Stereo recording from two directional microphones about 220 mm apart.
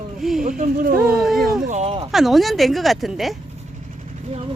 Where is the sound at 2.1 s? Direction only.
Centre (ahead or behind).